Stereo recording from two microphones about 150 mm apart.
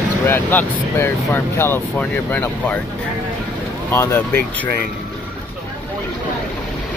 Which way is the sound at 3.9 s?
15° left (ahead or behind).